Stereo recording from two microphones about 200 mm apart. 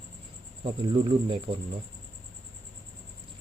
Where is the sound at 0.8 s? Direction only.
25° right (ahead or behind).